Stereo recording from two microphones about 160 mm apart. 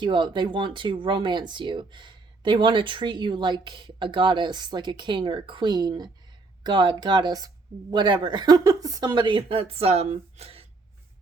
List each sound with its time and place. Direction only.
0.0 s speech: 30° right (ahead or behind)